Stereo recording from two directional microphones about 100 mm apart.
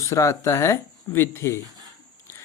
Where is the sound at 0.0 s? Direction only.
30° left (ahead or behind).